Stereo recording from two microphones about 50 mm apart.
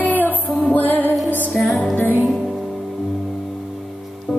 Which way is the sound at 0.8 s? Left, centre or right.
Left.